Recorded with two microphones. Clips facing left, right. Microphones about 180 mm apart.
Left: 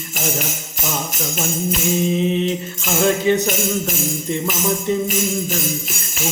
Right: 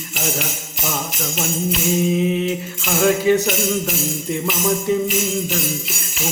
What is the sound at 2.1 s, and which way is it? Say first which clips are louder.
Mantra: even; 5° right (ahead or behind).